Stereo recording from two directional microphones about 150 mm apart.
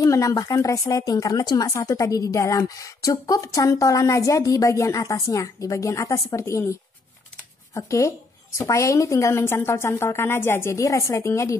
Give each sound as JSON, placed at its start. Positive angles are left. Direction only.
{"t": 0.0, "sound": "speech", "side_deg": 20}
{"t": 7.7, "sound": "speech", "side_deg": 20}